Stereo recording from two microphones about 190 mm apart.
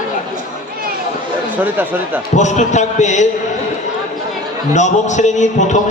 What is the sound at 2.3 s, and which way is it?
Speech, 40° left (ahead or behind).